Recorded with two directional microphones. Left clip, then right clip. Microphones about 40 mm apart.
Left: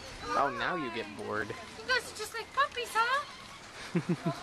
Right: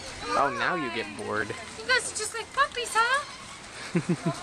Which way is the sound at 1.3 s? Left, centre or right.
Centre.